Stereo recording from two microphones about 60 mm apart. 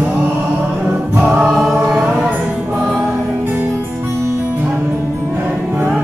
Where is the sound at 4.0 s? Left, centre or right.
Right.